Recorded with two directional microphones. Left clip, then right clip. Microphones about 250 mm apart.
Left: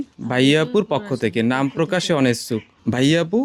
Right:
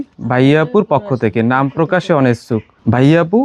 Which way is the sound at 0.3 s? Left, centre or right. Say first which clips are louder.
Right 5 dB; centre.